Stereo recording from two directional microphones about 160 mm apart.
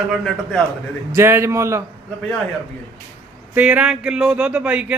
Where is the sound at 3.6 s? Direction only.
10° right (ahead or behind).